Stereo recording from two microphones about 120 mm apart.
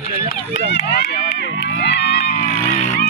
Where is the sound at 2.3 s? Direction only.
90° left.